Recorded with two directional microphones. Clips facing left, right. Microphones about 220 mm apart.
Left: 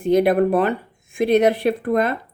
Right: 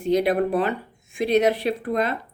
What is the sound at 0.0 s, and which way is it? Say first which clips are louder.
Speech: left 4 dB; 50° left (ahead or behind).